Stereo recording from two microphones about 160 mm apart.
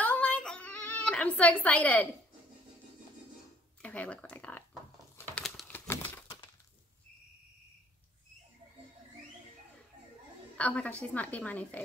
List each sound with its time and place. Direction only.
0.0 s a sound: 10° left (ahead or behind)
3.8 s speech: 10° left (ahead or behind)
5.1 s crumpling: 10° left (ahead or behind)
5.4 s typing: centre (ahead or behind)
5.9 s a sound: 15° left (ahead or behind)
6.2 s breaking: 30° left (ahead or behind)
10.6 s a woman's voice: 10° left (ahead or behind)